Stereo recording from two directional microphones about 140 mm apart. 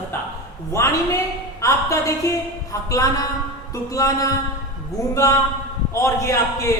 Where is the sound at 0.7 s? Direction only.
20° left (ahead or behind).